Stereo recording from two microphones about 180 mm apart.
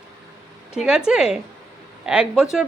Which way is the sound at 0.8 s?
5° right (ahead or behind).